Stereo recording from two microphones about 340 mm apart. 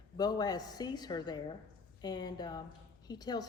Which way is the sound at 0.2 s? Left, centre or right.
Centre.